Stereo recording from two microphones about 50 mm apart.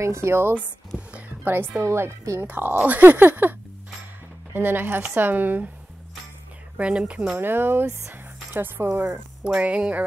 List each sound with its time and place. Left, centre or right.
0.0 s a woman's voice: right
1.9 s a woman's voice: right
2.4 s speech: right
4.6 s speech: right
6.8 s speech: right
7.3 s speech: right
8.1 s music: right
9.6 s speech: right